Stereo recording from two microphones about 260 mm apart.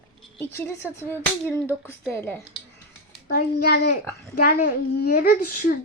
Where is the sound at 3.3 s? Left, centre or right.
Left.